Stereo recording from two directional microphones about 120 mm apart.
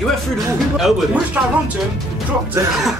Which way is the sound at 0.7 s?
Centre (ahead or behind).